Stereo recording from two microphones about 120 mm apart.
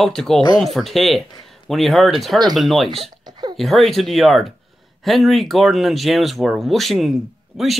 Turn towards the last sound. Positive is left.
turn(degrees=-5)  # may be behind; listen again after turning